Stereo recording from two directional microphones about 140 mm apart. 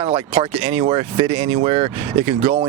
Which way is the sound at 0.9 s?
45° right (ahead or behind).